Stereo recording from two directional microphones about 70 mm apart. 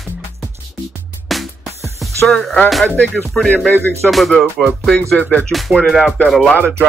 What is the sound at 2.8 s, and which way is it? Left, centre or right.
Speech, left.